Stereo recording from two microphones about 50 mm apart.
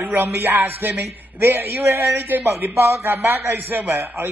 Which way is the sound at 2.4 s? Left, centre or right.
Right.